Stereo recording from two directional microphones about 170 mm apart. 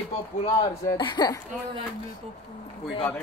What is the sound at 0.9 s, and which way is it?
Speech, 25° left (ahead or behind).